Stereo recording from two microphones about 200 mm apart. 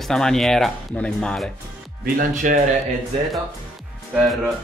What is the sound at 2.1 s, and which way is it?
Speech, 40° right (ahead or behind).